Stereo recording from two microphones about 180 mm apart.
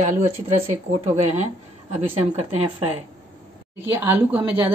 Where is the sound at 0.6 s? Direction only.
40° right (ahead or behind).